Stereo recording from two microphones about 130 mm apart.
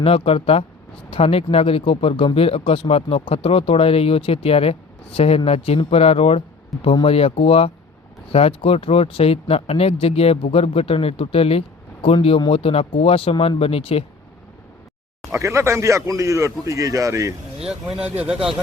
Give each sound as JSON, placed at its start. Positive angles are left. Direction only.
{"t": 0.0, "sound": "speech", "side_deg": 45}
{"t": 15.3, "sound": "speech", "side_deg": -20}